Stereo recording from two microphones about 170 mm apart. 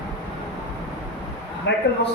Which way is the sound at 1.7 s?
90° left.